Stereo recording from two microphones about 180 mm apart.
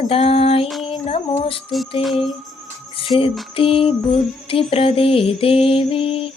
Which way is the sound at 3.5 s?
30° left (ahead or behind).